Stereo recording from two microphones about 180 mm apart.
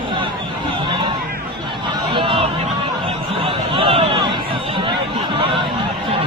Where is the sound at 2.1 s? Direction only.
30° right (ahead or behind).